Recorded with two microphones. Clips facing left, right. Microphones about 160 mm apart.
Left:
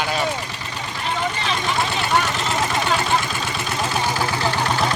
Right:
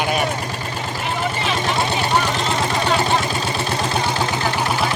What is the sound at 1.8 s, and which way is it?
Speech, 25° right (ahead or behind).